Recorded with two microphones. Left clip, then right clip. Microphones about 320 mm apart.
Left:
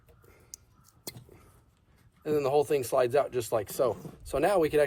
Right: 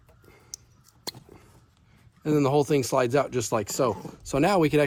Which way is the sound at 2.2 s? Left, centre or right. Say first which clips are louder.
Right 3 dB; right.